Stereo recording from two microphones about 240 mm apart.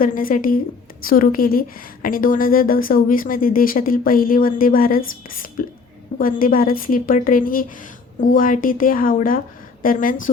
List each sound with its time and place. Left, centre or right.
0.0 s a woman's voice: left